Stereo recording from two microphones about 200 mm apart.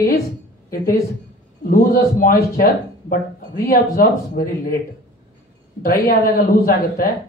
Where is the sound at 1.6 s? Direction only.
45° left (ahead or behind).